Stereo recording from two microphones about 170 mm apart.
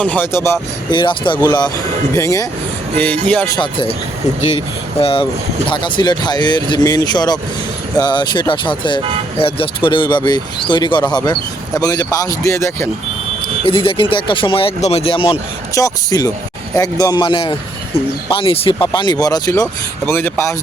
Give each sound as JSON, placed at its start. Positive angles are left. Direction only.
{"t": 0.0, "sound": "speech", "side_deg": 10}
{"t": 0.9, "sound": "speech", "side_deg": 30}
{"t": 3.5, "sound": "speech", "side_deg": 30}
{"t": 4.9, "sound": "speech", "side_deg": 35}
{"t": 13.7, "sound": "speech", "side_deg": 30}